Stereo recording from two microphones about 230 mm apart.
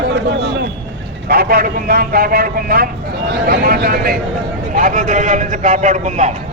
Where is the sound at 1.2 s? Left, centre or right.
Right.